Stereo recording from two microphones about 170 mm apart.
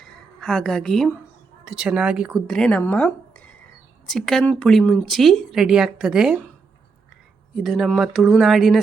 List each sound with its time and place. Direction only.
0.0 s a woman's voice: 5° left (ahead or behind)
7.5 s speech: centre (ahead or behind)